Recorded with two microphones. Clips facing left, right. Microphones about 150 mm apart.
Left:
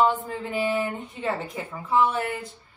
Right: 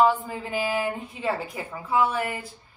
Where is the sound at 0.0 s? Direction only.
5° right (ahead or behind).